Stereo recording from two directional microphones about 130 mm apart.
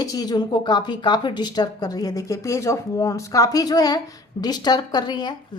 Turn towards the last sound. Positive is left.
turn(degrees=35)  # may be behind; listen again after turning